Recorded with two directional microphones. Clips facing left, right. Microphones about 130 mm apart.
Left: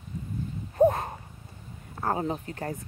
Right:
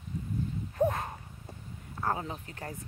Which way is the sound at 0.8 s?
35° left (ahead or behind).